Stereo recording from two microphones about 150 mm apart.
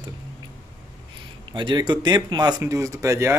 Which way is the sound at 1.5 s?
30° right (ahead or behind).